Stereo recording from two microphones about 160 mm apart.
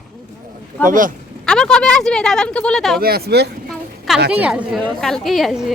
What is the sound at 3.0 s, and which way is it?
Speech, 70° right (ahead or behind).